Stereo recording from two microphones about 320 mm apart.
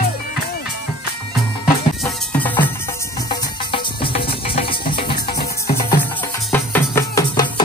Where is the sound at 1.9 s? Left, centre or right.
Centre.